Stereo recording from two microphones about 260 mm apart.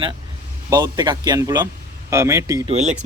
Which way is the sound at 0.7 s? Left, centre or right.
Centre.